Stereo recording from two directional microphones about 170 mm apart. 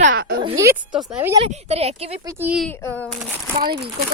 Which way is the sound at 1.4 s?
40° right (ahead or behind).